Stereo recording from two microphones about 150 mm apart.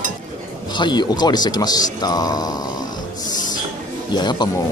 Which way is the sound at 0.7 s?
30° left (ahead or behind).